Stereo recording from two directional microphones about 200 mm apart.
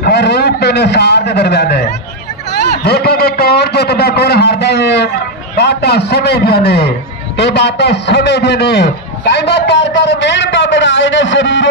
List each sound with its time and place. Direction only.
0.0 s a man's voice: 55° left (ahead or behind)